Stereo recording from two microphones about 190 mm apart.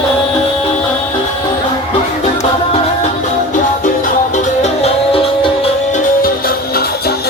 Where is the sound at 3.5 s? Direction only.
40° left (ahead or behind).